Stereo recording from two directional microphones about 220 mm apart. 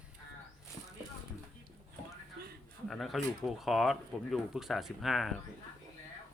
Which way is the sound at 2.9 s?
Centre (ahead or behind).